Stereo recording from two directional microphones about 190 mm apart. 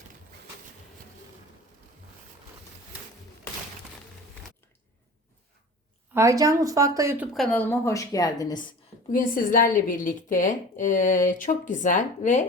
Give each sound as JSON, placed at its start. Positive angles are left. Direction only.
{"t": 6.1, "sound": "a woman's voice", "side_deg": -15}
{"t": 7.3, "sound": "a woman's voice", "side_deg": 5}
{"t": 9.1, "sound": "speech", "side_deg": 45}